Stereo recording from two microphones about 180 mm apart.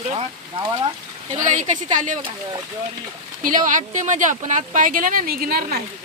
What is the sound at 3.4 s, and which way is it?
Speech, 50° right (ahead or behind).